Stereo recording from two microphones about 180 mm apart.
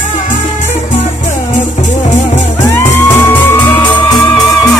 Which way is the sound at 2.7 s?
10° left (ahead or behind).